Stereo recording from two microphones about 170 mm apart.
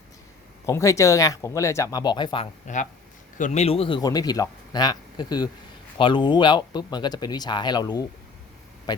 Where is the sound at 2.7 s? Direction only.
45° left (ahead or behind).